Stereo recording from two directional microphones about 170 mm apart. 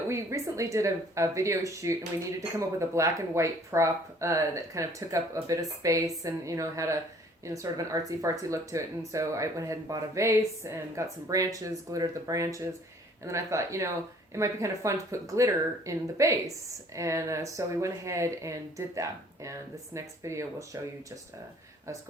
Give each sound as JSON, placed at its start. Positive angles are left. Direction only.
{"t": 0.1, "sound": "speech", "side_deg": -15}